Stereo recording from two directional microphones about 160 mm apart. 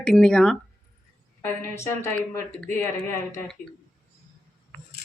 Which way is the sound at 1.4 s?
15° left (ahead or behind).